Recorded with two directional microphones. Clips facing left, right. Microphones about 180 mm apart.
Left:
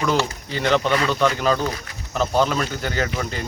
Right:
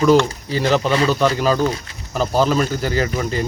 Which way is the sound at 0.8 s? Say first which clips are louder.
Right 3 dB; 30° right (ahead or behind).